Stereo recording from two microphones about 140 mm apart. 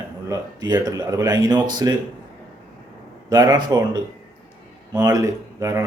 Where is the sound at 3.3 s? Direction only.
25° right (ahead or behind).